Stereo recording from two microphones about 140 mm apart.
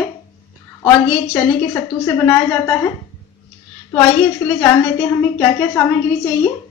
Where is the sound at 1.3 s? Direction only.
20° left (ahead or behind).